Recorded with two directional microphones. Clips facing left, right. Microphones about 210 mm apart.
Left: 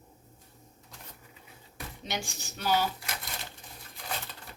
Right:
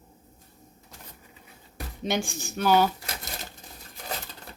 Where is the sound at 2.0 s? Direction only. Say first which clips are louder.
Right 9 dB; 50° right (ahead or behind).